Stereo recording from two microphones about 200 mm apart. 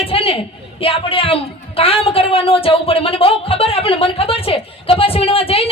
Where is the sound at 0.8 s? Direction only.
25° left (ahead or behind).